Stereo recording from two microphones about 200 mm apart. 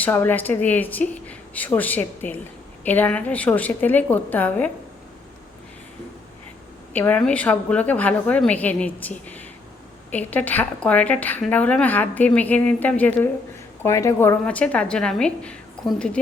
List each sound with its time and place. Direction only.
0.0 s a woman's voice: 10° left (ahead or behind)
6.9 s a woman's voice: 10° left (ahead or behind)
15.8 s a sound: 5° left (ahead or behind)